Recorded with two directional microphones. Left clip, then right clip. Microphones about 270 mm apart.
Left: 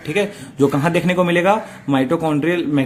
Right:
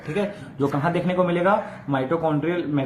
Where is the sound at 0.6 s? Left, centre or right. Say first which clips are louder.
Left 6 dB; left.